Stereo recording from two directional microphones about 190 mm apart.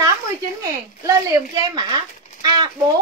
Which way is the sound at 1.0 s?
15° right (ahead or behind).